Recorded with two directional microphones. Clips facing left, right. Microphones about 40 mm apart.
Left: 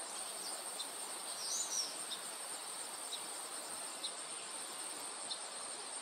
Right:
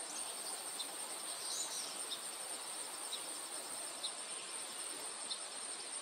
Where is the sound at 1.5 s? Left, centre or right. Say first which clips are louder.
Left 1 dB; right.